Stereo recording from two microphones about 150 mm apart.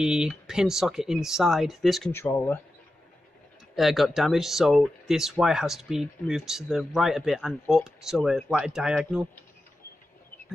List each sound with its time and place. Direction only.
0.0 s speech: 5° right (ahead or behind)
2.1 s speech: 15° left (ahead or behind)
3.7 s speech: centre (ahead or behind)